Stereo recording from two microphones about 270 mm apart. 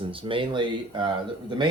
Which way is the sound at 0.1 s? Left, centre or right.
Centre.